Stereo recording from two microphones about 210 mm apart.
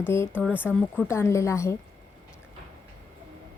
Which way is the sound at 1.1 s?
10° left (ahead or behind).